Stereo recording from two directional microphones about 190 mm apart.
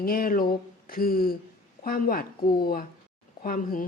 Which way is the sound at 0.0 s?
50° left (ahead or behind).